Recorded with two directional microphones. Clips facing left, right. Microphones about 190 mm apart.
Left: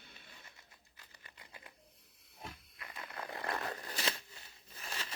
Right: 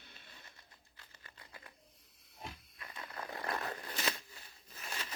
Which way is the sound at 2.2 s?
55° left (ahead or behind).